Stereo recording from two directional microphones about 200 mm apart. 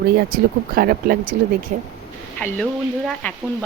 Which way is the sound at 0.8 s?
50° right (ahead or behind).